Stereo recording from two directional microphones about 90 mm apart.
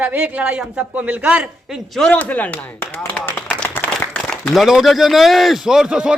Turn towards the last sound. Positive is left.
turn(degrees=-10)  # may be behind; listen again after turning